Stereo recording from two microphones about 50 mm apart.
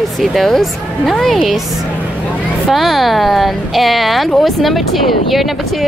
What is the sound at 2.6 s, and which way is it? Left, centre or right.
Speech, centre.